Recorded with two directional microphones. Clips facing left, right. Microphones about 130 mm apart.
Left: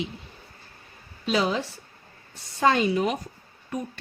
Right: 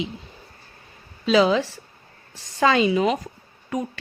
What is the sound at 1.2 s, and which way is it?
A woman's voice, 90° right.